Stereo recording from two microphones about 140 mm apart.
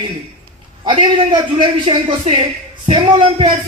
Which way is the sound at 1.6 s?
40° right (ahead or behind).